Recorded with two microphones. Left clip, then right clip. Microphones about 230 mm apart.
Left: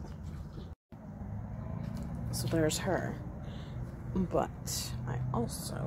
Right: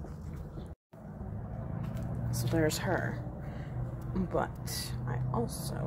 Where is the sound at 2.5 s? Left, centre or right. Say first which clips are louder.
Right 1 dB; centre.